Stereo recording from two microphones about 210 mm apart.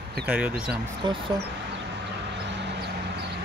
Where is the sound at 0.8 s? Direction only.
20° right (ahead or behind).